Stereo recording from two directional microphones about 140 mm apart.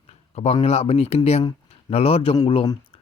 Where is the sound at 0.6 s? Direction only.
45° left (ahead or behind).